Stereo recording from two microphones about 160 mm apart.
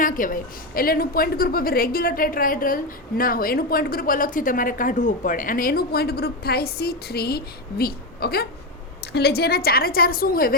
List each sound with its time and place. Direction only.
0.0 s a woman's voice: 60° left (ahead or behind)
9.1 s a woman's voice: 85° left; by 10.5 s 65° left (ahead or behind)